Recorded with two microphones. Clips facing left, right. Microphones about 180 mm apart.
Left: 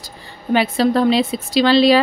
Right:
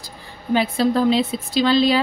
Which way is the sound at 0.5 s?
75° left (ahead or behind).